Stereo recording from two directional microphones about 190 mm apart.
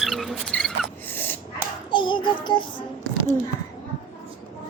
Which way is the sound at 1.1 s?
10° left (ahead or behind).